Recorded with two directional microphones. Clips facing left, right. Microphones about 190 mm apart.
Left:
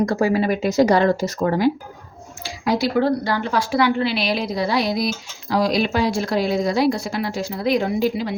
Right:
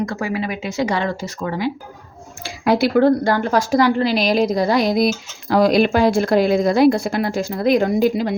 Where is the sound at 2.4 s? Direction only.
60° right (ahead or behind).